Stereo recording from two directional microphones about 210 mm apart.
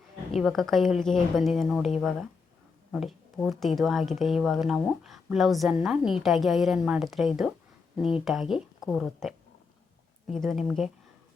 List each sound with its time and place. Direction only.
0.3 s speech: centre (ahead or behind)
10.3 s speech: centre (ahead or behind)